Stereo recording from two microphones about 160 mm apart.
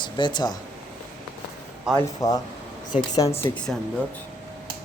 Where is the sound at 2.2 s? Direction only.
20° left (ahead or behind).